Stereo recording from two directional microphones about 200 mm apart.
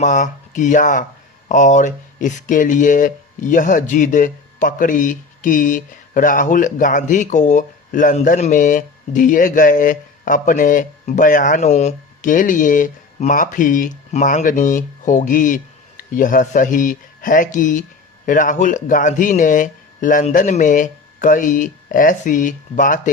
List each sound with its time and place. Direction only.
0.0 s speech: 40° left (ahead or behind)